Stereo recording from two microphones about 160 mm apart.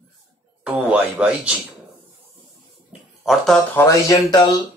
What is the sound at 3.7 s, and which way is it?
Speech, 20° left (ahead or behind).